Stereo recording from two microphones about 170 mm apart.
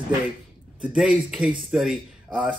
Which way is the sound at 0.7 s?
5° right (ahead or behind).